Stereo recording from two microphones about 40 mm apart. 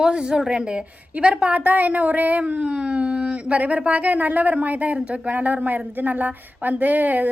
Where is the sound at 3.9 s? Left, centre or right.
Right.